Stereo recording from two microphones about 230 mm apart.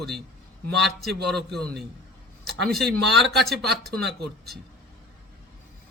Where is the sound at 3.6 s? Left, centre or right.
Right.